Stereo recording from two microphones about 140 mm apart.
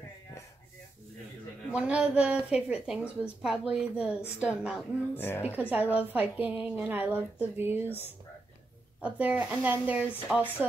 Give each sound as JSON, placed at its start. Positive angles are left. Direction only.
{"t": 1.7, "sound": "a woman's voice", "side_deg": -10}
{"t": 5.1, "sound": "a woman's voice", "side_deg": 15}
{"t": 5.7, "sound": "a woman's voice", "side_deg": -10}